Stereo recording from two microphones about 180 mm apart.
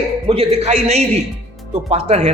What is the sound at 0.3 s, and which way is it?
A man's voice, 35° right (ahead or behind).